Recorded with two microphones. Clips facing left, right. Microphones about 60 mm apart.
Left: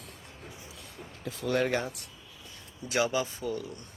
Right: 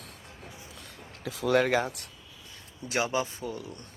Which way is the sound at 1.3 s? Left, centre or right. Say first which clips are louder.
Right 4 dB; right.